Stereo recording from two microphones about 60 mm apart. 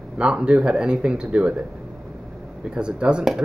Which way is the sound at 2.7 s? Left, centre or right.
Centre.